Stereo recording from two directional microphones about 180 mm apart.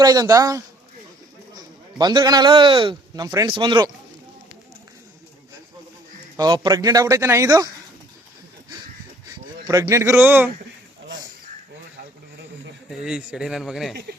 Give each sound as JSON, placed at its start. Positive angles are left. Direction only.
{"t": 0.0, "sound": "a man's voice", "side_deg": -20}
{"t": 6.3, "sound": "speech", "side_deg": -20}
{"t": 9.6, "sound": "a man's voice", "side_deg": -15}
{"t": 12.9, "sound": "speech", "side_deg": -5}